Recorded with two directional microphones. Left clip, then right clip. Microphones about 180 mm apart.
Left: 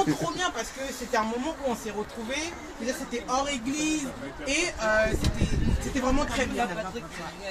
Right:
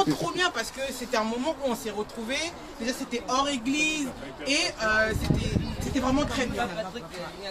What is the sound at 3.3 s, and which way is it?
Speech, 30° left (ahead or behind).